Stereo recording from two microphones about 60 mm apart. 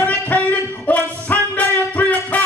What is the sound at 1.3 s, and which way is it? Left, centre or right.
Music, left.